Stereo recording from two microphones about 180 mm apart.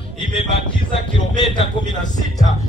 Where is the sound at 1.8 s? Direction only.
25° left (ahead or behind).